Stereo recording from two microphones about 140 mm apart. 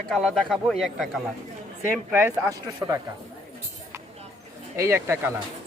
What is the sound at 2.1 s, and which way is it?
Speech, 20° right (ahead or behind).